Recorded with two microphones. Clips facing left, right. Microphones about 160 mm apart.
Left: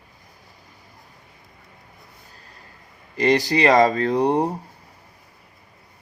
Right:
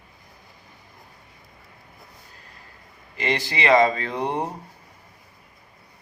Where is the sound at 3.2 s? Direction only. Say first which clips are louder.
Left 7 dB; 40° left (ahead or behind).